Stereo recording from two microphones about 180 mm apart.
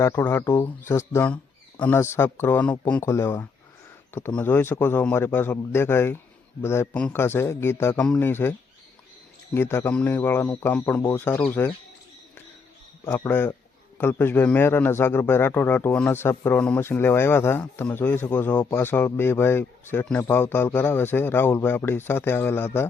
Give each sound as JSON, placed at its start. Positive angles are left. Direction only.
{"t": 0.0, "sound": "a man's voice", "side_deg": 15}
{"t": 9.6, "sound": "a man's voice", "side_deg": 10}
{"t": 13.1, "sound": "a man's voice", "side_deg": 10}